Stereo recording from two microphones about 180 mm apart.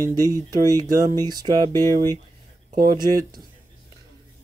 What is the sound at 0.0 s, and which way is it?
Speech, 20° right (ahead or behind).